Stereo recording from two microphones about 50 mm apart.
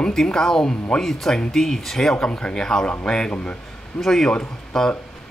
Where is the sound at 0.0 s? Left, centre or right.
Centre.